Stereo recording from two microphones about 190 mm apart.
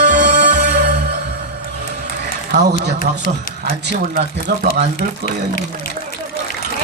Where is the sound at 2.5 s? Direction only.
60° right (ahead or behind).